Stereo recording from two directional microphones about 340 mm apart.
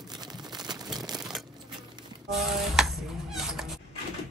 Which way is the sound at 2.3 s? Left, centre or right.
Centre.